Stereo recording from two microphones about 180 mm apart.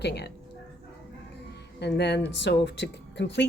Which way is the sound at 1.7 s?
70° left (ahead or behind).